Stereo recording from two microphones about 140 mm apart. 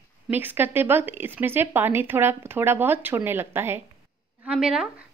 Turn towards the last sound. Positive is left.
turn(degrees=-5)  # may be behind; listen again after turning